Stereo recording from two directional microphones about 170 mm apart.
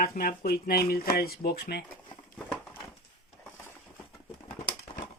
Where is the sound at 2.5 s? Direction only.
5° left (ahead or behind).